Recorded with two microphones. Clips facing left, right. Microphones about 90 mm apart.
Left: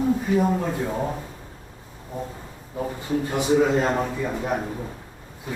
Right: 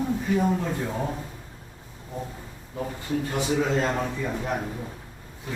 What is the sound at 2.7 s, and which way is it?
A man's voice, 15° left (ahead or behind).